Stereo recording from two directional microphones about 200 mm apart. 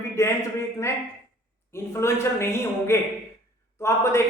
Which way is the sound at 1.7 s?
15° left (ahead or behind).